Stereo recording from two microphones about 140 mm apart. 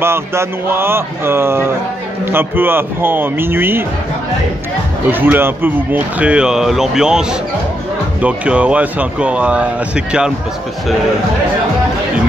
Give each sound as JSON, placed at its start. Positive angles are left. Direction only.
{"t": 0.0, "sound": "speech", "side_deg": -20}
{"t": 5.1, "sound": "speech", "side_deg": -15}